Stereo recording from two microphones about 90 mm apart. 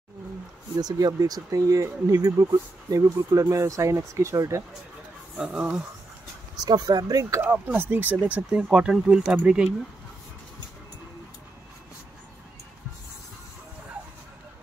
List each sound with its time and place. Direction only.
0.7 s speech: 45° right (ahead or behind)
5.4 s speech: 10° right (ahead or behind)
6.6 s speech: 50° right (ahead or behind)
7.4 s speech: 20° right (ahead or behind)